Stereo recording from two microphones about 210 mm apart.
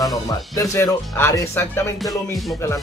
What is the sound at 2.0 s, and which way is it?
Music, centre (ahead or behind).